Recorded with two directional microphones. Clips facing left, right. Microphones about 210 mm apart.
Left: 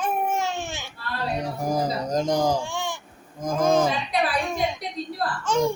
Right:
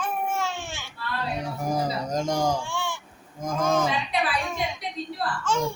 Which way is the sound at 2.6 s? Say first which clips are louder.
Left 1 dB; 15° left (ahead or behind).